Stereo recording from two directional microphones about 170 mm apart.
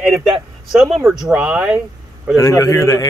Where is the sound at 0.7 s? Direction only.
Centre (ahead or behind).